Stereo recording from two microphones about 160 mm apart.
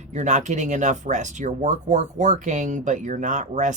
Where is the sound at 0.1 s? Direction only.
45° right (ahead or behind).